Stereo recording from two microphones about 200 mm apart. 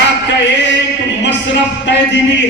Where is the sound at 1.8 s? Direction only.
65° left (ahead or behind).